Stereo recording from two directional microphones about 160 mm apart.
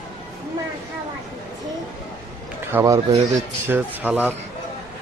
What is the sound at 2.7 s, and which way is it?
A man's voice, 15° right (ahead or behind).